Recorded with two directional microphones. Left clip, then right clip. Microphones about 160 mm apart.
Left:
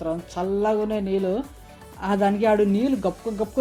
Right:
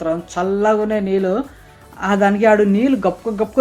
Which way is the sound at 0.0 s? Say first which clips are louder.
Right 7 dB; 20° left (ahead or behind).